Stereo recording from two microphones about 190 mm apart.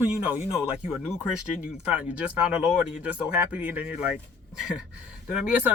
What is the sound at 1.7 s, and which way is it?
Speech, 5° right (ahead or behind).